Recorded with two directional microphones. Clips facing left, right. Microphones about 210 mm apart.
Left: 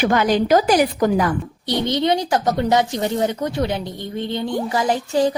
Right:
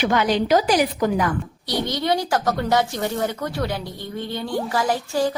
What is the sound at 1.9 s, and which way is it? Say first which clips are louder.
Speech: left 4 dB; 20° left (ahead or behind).